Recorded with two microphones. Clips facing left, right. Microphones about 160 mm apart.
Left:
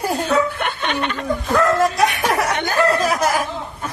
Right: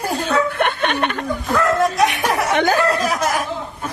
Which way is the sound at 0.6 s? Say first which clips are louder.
Right 4 dB; 55° right (ahead or behind).